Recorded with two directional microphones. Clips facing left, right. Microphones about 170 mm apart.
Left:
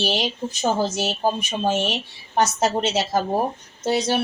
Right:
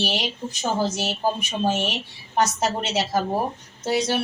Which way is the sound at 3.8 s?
25° left (ahead or behind).